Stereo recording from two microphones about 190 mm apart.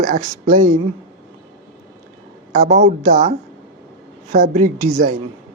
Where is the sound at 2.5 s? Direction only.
35° right (ahead or behind).